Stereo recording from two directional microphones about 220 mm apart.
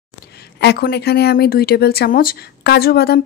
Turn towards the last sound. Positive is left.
turn(degrees=45)  # may be behind; listen again after turning